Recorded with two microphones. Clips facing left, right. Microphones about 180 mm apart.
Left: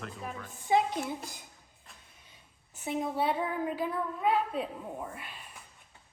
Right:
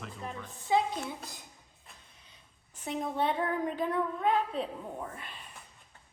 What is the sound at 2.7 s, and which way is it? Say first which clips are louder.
A woman's voice: left 2 dB; 5° left (ahead or behind).